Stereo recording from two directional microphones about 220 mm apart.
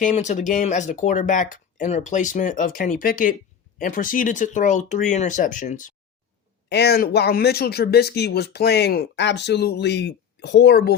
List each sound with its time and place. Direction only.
0.0 s speech: 35° left (ahead or behind)
6.7 s speech: 50° left (ahead or behind)